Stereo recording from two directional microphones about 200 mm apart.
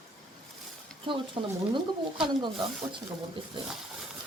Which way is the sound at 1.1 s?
25° right (ahead or behind).